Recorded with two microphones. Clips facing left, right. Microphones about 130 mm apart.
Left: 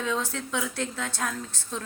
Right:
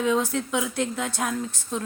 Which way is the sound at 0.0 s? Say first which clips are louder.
Right 6 dB; 15° right (ahead or behind).